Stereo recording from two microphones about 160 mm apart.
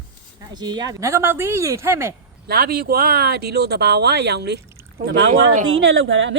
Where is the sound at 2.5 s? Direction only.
75° right (ahead or behind).